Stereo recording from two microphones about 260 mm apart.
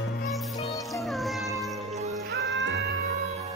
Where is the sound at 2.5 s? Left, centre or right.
Right.